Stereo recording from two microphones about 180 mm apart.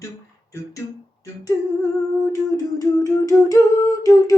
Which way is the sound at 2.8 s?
20° left (ahead or behind).